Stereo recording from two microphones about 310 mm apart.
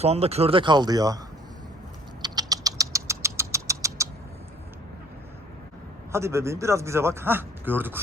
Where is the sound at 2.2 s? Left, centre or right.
Centre.